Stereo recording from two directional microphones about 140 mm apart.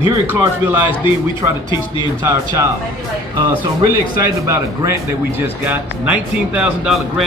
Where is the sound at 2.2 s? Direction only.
20° right (ahead or behind).